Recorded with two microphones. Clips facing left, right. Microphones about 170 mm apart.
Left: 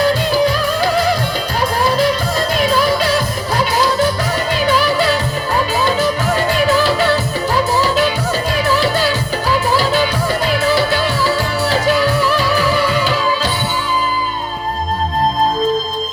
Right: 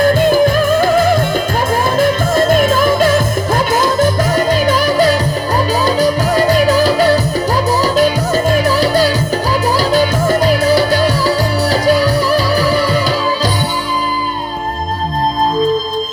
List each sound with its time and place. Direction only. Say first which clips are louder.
0.0 s music: right 4 dB; 50° right (ahead or behind)